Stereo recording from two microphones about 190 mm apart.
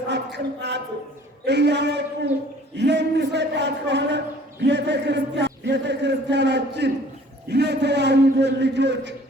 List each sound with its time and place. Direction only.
0.1 s speech: 65° right (ahead or behind)
1.5 s chant: 65° right (ahead or behind)